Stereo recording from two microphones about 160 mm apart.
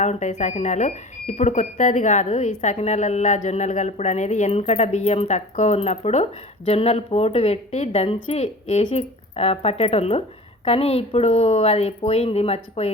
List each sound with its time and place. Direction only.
0.0 s speech: 45° left (ahead or behind)